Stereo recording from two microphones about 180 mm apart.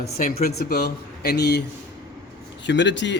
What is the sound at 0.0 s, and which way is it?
Speech, 55° left (ahead or behind).